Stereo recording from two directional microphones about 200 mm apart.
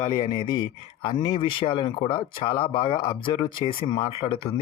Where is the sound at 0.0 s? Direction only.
20° left (ahead or behind).